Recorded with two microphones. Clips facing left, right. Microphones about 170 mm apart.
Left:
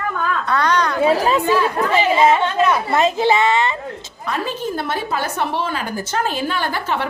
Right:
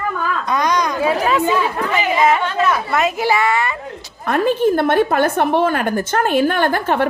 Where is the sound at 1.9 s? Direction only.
30° left (ahead or behind).